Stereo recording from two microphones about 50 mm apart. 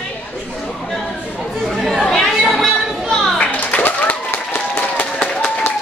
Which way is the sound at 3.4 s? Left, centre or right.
Left.